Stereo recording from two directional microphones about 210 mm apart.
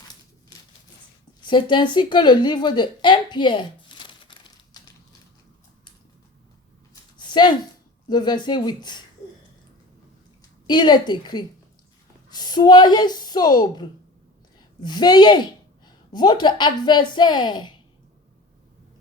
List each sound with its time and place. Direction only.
1.5 s speech: 20° left (ahead or behind)
7.2 s a sound: 20° left (ahead or behind)
8.1 s a woman's voice: 20° left (ahead or behind)
10.7 s a woman's voice: 20° left (ahead or behind)